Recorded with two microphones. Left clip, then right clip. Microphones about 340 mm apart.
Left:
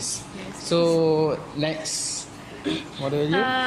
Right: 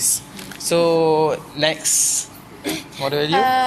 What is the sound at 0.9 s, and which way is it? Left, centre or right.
Speech, right.